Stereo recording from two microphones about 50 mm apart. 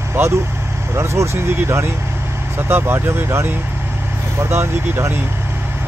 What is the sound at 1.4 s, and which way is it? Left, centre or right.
Speech, right.